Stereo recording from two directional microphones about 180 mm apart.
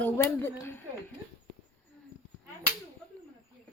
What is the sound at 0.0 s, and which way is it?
Speech, 10° left (ahead or behind).